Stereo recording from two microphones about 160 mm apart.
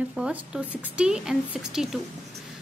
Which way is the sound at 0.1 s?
5° right (ahead or behind).